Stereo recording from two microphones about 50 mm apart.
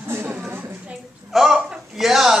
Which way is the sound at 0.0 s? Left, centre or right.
Right.